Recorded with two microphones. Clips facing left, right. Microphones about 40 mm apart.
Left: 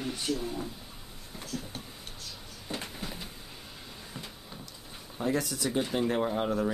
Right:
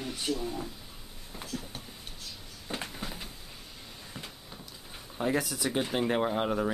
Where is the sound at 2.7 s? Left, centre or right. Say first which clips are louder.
Right 1 dB; centre.